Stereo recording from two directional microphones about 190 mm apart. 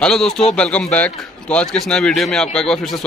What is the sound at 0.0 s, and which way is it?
Speech, 5° left (ahead or behind).